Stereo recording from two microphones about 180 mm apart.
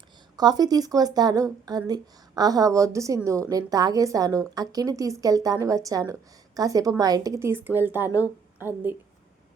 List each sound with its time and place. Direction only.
0.3 s a woman's voice: 20° right (ahead or behind)